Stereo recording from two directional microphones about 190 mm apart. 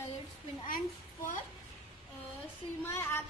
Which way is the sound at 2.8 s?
15° left (ahead or behind).